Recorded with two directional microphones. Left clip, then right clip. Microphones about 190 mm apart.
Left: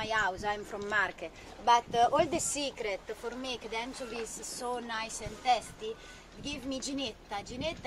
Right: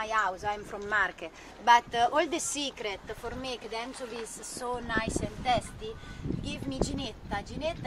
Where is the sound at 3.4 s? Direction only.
20° right (ahead or behind).